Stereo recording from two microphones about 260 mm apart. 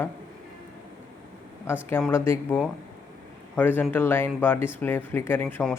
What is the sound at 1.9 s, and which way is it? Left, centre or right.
Speech, centre.